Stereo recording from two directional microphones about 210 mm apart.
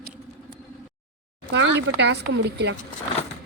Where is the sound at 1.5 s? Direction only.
60° right (ahead or behind).